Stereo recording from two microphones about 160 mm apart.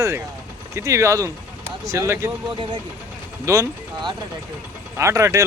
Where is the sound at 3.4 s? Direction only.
20° right (ahead or behind).